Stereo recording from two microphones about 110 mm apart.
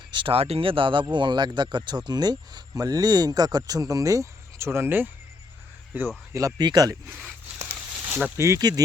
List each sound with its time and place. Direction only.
0.1 s speech: 50° right (ahead or behind); by 6.1 s 15° right (ahead or behind)
6.3 s speech: 35° right (ahead or behind)
8.0 s a sound: 15° right (ahead or behind)
8.4 s speech: 25° right (ahead or behind)